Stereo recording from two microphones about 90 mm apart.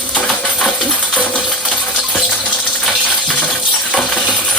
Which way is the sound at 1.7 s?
15° left (ahead or behind).